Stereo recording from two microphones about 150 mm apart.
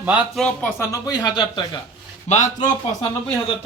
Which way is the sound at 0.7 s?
20° left (ahead or behind).